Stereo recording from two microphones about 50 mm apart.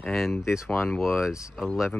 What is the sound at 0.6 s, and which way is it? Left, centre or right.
Speech, left.